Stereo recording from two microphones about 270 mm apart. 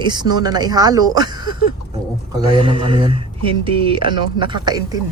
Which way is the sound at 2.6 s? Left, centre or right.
Centre.